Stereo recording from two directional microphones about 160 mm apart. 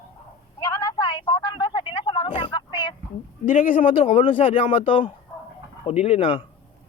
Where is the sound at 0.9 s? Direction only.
30° left (ahead or behind).